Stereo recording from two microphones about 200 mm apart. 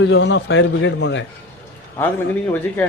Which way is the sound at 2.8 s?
5° left (ahead or behind).